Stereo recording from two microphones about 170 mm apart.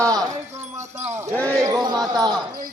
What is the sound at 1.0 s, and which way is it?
Speech, 15° right (ahead or behind).